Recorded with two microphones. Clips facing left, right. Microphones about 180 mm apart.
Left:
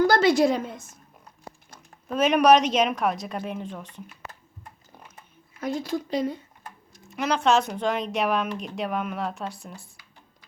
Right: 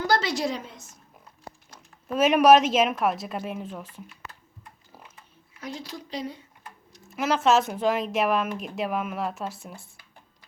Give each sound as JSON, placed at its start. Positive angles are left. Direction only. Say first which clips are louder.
{"t": 0.1, "sound": "a woman's voice", "louder": "left 6 dB", "side_deg": 55}
{"t": 2.0, "sound": "a woman's voice", "louder": "right 1 dB", "side_deg": -5}
{"t": 5.1, "sound": "a sound", "louder": "left 3 dB", "side_deg": 50}
{"t": 7.1, "sound": "a woman's voice", "louder": "even", "side_deg": 0}